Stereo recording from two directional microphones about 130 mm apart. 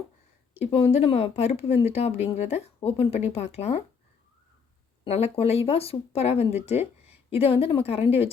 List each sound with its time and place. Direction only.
0.5 s speech: 55° left (ahead or behind)
5.0 s speech: 50° left (ahead or behind)